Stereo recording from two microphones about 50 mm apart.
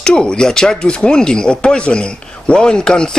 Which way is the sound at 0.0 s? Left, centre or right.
Centre.